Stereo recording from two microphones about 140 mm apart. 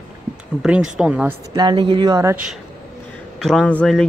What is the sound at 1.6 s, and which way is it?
Speech, 35° right (ahead or behind).